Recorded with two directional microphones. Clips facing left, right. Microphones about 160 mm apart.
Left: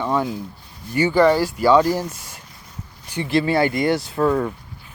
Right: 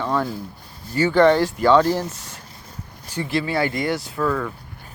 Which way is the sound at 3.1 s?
25° left (ahead or behind).